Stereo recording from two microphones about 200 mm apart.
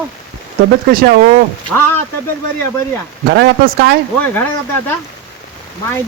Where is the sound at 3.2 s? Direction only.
55° right (ahead or behind).